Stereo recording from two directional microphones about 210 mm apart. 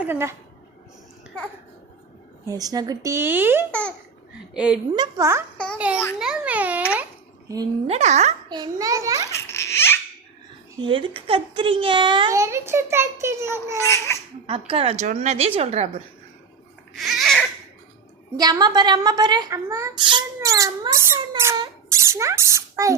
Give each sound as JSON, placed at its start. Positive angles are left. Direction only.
{"t": 0.0, "sound": "speech", "side_deg": -10}
{"t": 2.5, "sound": "speech", "side_deg": -15}
{"t": 3.7, "sound": "a child's voice", "side_deg": 5}
{"t": 4.5, "sound": "a child's voice", "side_deg": -5}
{"t": 4.9, "sound": "a child's voice", "side_deg": -15}
{"t": 7.4, "sound": "speech", "side_deg": -15}
{"t": 7.9, "sound": "a woman's voice", "side_deg": -30}
{"t": 8.4, "sound": "speech", "side_deg": -20}
{"t": 9.3, "sound": "baby laughter", "side_deg": 10}
{"t": 10.8, "sound": "a child's voice", "side_deg": -25}
{"t": 14.1, "sound": "a sound", "side_deg": 10}
{"t": 14.4, "sound": "a woman's voice", "side_deg": -25}
{"t": 16.9, "sound": "babbling", "side_deg": 0}
{"t": 18.3, "sound": "a child's voice", "side_deg": -20}